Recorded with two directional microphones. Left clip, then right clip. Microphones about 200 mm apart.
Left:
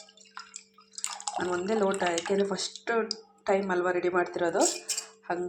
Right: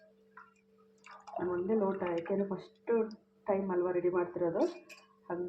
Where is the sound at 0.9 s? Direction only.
35° left (ahead or behind).